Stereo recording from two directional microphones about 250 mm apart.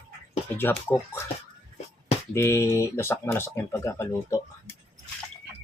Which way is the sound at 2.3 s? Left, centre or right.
Centre.